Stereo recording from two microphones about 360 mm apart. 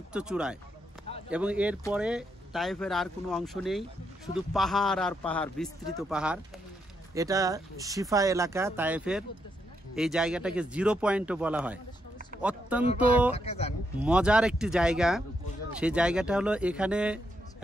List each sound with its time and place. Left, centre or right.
0.1 s speech: centre
13.3 s speech: centre
14.0 s speech: centre